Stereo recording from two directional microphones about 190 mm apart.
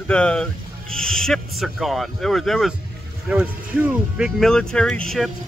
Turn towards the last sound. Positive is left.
turn(degrees=5)  # may be behind; listen again after turning